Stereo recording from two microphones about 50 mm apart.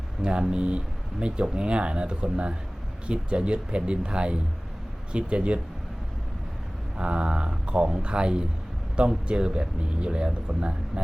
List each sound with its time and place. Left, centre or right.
0.2 s speech: centre
6.9 s speech: centre